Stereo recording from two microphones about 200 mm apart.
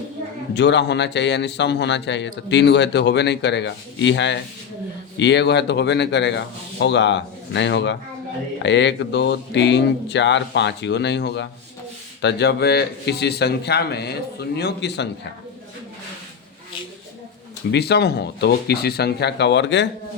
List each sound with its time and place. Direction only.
0.5 s a man's voice: 60° left (ahead or behind)
17.7 s a man's voice: 55° left (ahead or behind)